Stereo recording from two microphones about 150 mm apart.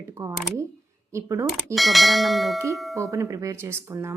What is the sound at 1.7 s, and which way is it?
Speech, centre (ahead or behind).